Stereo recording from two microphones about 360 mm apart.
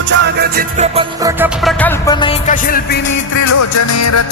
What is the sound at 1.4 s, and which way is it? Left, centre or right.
Music, centre.